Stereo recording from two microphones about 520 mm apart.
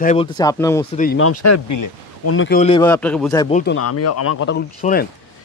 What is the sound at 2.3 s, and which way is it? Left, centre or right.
Speech, centre.